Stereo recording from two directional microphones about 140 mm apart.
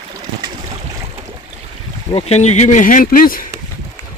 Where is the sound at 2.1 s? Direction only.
45° left (ahead or behind); by 3.4 s 85° left.